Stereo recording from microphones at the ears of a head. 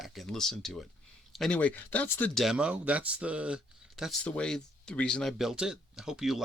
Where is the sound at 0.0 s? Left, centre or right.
Centre.